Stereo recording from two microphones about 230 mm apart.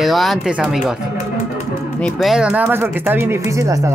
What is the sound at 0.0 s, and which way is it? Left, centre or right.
Speech, centre.